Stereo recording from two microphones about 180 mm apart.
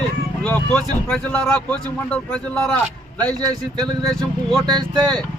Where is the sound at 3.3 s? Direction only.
20° right (ahead or behind).